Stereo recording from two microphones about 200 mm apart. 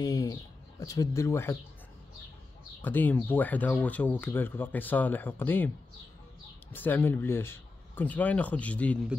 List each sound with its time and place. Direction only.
0.0 s speech: 20° left (ahead or behind)
2.8 s speech: 10° left (ahead or behind)
6.7 s speech: 10° left (ahead or behind)